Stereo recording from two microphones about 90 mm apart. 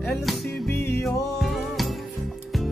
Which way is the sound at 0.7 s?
25° left (ahead or behind).